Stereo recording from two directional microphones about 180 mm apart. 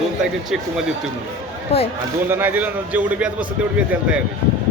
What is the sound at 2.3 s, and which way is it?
A man's voice, 10° right (ahead or behind).